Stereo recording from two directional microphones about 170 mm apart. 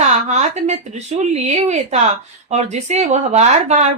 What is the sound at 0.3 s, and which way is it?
A woman's voice, 45° right (ahead or behind).